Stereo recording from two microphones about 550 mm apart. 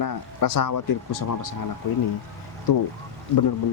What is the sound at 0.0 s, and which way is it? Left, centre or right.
Speech, left.